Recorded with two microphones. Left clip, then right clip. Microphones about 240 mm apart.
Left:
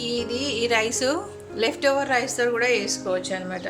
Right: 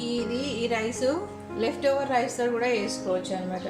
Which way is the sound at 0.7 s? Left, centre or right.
Left.